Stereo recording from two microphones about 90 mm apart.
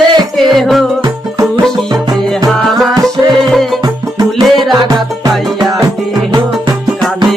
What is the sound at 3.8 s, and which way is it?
Music, 45° right (ahead or behind).